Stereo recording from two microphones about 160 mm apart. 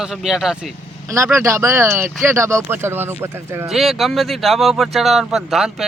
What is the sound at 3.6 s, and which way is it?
Speech, centre (ahead or behind).